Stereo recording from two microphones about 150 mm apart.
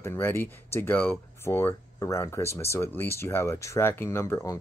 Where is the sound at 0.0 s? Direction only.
15° left (ahead or behind).